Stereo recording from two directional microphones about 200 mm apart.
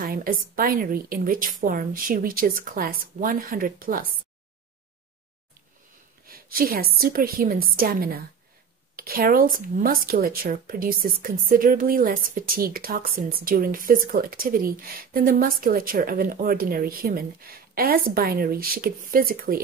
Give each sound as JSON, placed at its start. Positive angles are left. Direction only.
{"t": 0.0, "sound": "speech", "side_deg": -45}
{"t": 6.2, "sound": "speech", "side_deg": -45}